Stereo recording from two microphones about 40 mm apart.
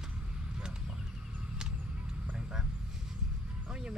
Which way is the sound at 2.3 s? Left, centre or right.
Centre.